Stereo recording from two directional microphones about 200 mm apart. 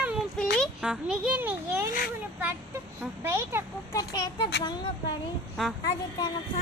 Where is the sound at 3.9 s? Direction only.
20° left (ahead or behind).